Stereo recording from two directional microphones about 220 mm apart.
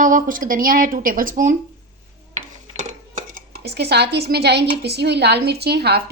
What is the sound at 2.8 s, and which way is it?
Speech, 35° right (ahead or behind).